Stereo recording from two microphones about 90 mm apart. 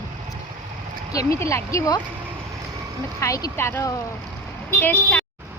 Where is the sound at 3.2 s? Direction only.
35° left (ahead or behind).